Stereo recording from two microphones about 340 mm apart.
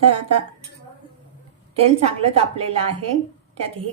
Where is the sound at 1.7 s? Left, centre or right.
Centre.